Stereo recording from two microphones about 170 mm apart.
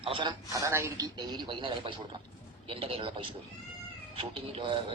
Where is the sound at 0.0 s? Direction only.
30° right (ahead or behind).